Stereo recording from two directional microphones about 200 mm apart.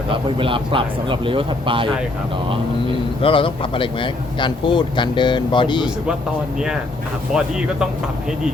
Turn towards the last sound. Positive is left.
turn(degrees=-5)  # may be behind; listen again after turning